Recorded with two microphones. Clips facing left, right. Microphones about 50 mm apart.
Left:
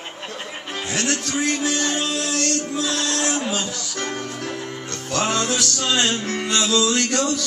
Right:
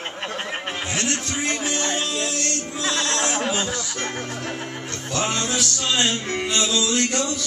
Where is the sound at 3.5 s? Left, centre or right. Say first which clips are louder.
Right 1 dB; right.